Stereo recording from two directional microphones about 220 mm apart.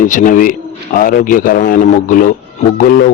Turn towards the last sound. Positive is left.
turn(degrees=40)  # may be behind; listen again after turning